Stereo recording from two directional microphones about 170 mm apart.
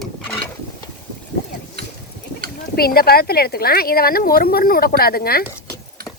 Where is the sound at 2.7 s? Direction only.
65° left (ahead or behind).